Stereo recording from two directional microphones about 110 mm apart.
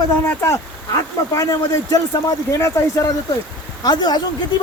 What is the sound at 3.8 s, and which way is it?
Speech, 40° left (ahead or behind).